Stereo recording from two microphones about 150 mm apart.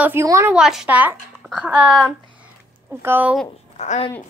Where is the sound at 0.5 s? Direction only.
5° right (ahead or behind).